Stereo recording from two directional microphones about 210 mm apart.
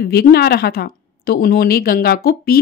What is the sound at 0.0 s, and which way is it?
Speech, 50° left (ahead or behind).